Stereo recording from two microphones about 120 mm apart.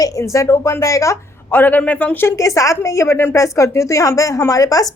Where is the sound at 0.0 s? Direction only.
25° left (ahead or behind).